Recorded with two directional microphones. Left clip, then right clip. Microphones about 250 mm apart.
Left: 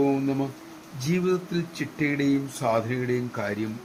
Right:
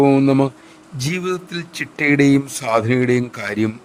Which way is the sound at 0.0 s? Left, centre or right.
Right.